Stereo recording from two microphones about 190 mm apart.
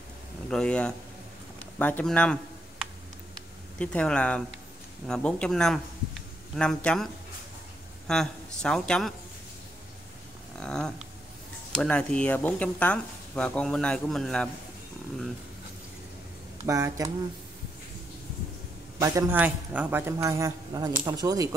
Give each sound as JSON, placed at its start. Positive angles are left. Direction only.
{"t": 0.5, "sound": "speech", "side_deg": 5}
{"t": 3.7, "sound": "speech", "side_deg": 5}
{"t": 8.1, "sound": "speech", "side_deg": 5}
{"t": 10.6, "sound": "a sound", "side_deg": 5}
{"t": 11.7, "sound": "speech", "side_deg": 5}
{"t": 16.6, "sound": "a man's voice", "side_deg": -15}
{"t": 18.9, "sound": "a man's voice", "side_deg": -15}